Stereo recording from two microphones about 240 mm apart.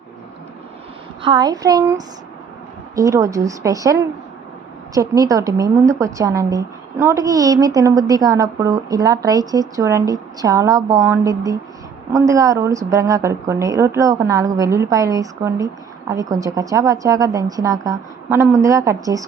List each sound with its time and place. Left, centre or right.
1.2 s a woman's voice: centre
4.9 s a woman's voice: centre